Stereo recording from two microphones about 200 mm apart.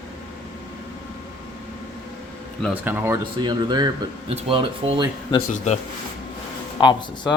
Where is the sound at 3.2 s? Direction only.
20° right (ahead or behind).